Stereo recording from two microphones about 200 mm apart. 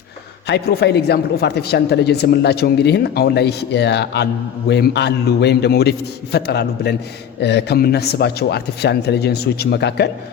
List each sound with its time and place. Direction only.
0.4 s a man's voice: 55° left (ahead or behind)